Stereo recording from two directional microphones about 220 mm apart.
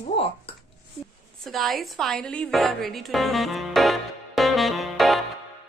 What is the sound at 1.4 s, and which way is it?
A woman's voice, centre (ahead or behind).